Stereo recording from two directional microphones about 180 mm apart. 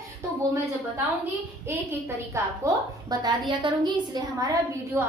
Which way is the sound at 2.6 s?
15° right (ahead or behind).